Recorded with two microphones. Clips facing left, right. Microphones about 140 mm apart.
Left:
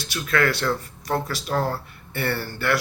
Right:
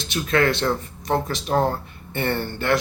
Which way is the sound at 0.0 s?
20° right (ahead or behind).